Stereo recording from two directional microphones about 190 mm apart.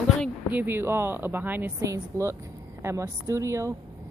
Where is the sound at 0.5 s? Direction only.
10° right (ahead or behind).